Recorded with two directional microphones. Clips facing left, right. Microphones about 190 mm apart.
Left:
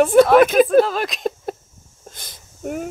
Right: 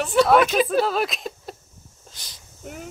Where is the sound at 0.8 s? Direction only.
Centre (ahead or behind).